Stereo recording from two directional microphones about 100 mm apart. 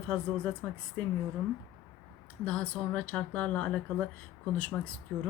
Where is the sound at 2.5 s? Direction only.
15° left (ahead or behind).